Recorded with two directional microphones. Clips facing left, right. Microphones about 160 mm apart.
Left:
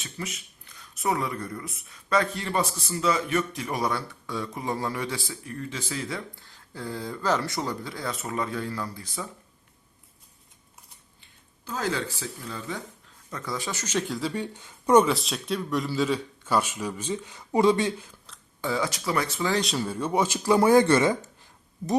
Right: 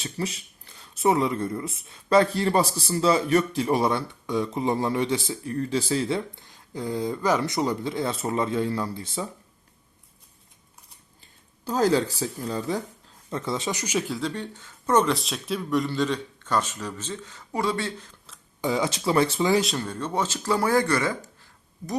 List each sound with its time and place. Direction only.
0.0 s speech: 30° right (ahead or behind)
5.5 s speech: 35° right (ahead or behind)
11.2 s speech: 35° right (ahead or behind)
13.3 s speech: 25° right (ahead or behind)
14.1 s speech: 5° left (ahead or behind)
15.0 s speech: centre (ahead or behind)
18.6 s speech: 20° right (ahead or behind)
19.5 s speech: 5° right (ahead or behind); by 21.2 s 20° left (ahead or behind)